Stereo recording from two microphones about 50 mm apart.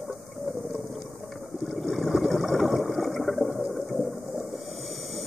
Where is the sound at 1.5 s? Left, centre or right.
Centre.